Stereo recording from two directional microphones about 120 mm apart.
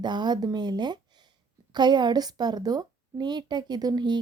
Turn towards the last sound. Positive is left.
turn(degrees=-35)  # may be behind; listen again after turning